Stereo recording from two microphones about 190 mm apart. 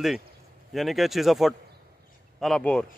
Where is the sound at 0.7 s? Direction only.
Centre (ahead or behind).